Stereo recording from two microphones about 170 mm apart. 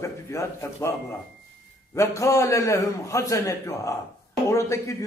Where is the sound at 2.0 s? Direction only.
20° left (ahead or behind).